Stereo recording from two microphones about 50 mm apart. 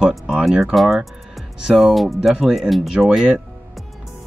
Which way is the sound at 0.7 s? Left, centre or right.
Centre.